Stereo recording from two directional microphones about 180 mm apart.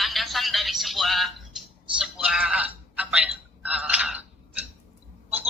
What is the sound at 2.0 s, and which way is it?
Telephone, 5° right (ahead or behind).